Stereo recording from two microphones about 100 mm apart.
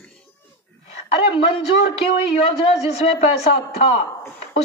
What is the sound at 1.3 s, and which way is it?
A man's voice, 60° left (ahead or behind).